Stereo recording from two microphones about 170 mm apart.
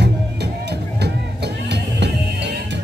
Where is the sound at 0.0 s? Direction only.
80° right.